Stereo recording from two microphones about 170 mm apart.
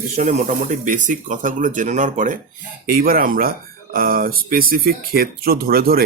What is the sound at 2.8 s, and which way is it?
Speech, 60° right (ahead or behind).